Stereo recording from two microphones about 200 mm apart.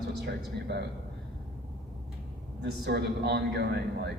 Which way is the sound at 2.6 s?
55° right (ahead or behind).